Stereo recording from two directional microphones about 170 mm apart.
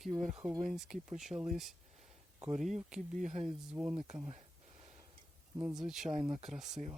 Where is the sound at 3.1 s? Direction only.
45° right (ahead or behind).